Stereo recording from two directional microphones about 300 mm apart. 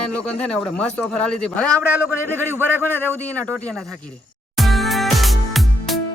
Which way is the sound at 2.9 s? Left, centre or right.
Centre.